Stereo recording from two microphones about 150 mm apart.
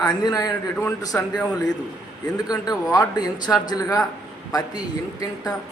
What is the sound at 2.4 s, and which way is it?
A man's voice, 25° left (ahead or behind).